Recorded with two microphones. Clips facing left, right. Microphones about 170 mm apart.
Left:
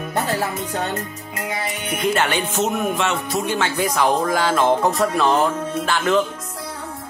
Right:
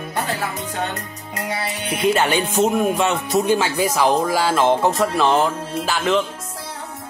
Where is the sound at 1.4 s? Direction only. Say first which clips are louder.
Right 1 dB; 35° right (ahead or behind).